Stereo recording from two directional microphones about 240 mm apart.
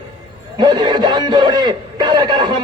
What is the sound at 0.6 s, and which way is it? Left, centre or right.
A man's voice, centre.